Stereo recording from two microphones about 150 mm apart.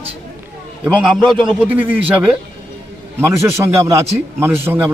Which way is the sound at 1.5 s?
10° right (ahead or behind).